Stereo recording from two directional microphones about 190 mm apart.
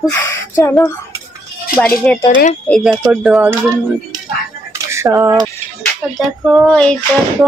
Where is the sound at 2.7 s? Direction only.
Centre (ahead or behind).